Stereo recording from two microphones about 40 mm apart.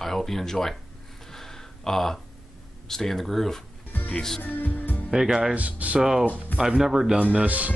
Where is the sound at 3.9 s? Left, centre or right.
Left.